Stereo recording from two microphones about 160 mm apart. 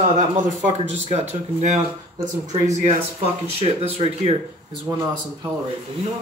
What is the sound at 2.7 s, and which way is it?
Speech, 45° right (ahead or behind).